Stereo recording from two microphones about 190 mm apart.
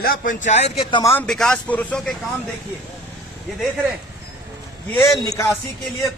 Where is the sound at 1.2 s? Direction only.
5° left (ahead or behind).